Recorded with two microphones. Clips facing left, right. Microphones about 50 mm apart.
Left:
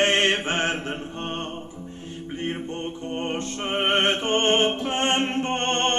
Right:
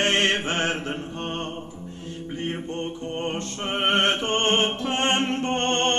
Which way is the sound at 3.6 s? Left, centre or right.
Left.